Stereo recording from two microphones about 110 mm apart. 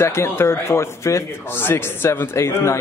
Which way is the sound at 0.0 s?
25° left (ahead or behind).